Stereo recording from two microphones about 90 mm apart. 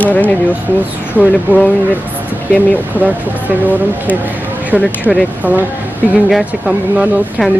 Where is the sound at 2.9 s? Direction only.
20° right (ahead or behind).